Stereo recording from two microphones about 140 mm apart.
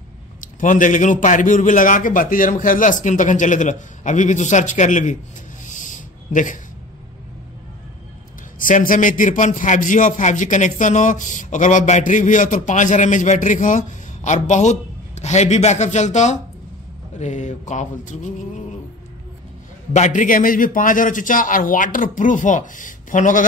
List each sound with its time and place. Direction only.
0.4 s a man's voice: 70° left (ahead or behind)
5.7 s a sound: 65° left (ahead or behind)
8.5 s a man's voice: 75° left (ahead or behind)
19.9 s a man's voice: 60° left (ahead or behind)